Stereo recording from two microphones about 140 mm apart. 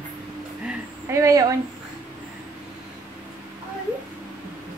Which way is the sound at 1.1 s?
25° right (ahead or behind).